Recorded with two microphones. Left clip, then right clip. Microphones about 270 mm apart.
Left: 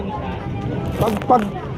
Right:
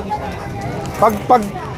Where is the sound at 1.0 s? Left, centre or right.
Right.